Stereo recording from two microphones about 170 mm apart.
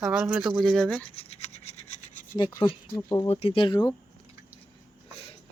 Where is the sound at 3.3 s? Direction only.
35° left (ahead or behind).